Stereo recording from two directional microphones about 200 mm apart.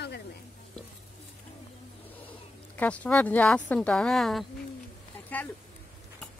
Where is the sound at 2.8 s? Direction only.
5° left (ahead or behind).